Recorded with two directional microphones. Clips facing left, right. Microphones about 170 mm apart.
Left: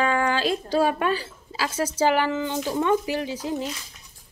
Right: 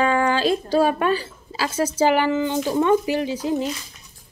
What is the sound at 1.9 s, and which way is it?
Speech, 15° right (ahead or behind).